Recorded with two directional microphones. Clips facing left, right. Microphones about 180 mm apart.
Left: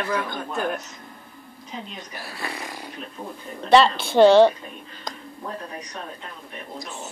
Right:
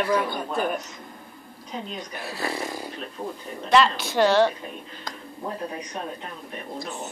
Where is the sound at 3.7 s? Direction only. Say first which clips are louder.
Left 4 dB; 30° left (ahead or behind).